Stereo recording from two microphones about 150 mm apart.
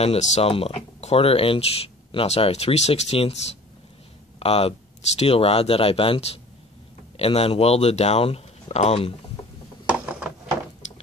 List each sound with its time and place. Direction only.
0.0 s speech: 45° left (ahead or behind)
4.4 s speech: 40° left (ahead or behind)
9.8 s a sound: 10° right (ahead or behind)